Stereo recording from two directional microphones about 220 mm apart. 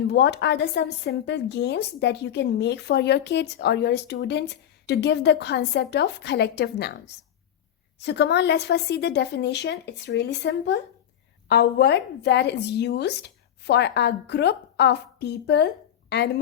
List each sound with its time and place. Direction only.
0.1 s a woman's voice: 50° left (ahead or behind)